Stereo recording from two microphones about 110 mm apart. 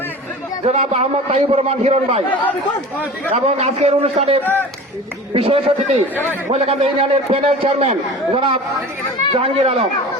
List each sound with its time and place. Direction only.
0.7 s a man's voice: 75° right (ahead or behind)
2.3 s speech: 15° left (ahead or behind)
3.3 s a man's voice: 80° right